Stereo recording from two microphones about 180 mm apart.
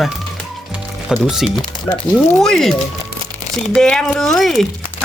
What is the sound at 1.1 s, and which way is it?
Speech, centre (ahead or behind).